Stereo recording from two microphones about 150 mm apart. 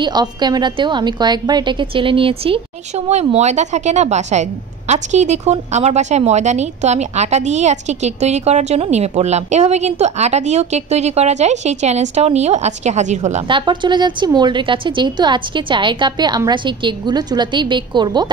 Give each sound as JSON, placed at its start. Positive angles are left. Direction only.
{"t": 0.0, "sound": "a woman's voice", "side_deg": -30}
{"t": 3.1, "sound": "a woman's voice", "side_deg": -45}
{"t": 13.5, "sound": "a woman's voice", "side_deg": -30}